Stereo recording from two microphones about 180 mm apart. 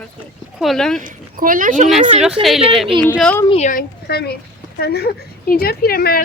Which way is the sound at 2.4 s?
30° right (ahead or behind).